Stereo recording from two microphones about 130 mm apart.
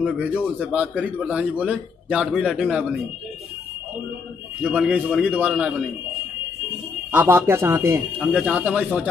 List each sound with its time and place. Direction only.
0.7 s a man's voice: 10° right (ahead or behind)
4.6 s a man's voice: 10° right (ahead or behind)
7.1 s a man's voice: 15° right (ahead or behind)
8.2 s a man's voice: 5° right (ahead or behind)